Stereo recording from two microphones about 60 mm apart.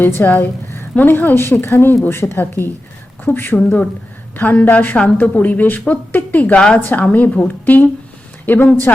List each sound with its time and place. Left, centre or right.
0.2 s a woman's voice: left; by 6.7 s centre
6.7 s speech: left
7.0 s a woman's voice: left